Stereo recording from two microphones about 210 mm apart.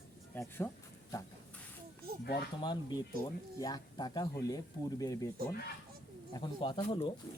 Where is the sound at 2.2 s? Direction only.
50° left (ahead or behind).